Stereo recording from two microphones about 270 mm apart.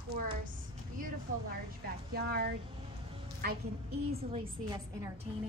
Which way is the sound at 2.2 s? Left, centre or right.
Right.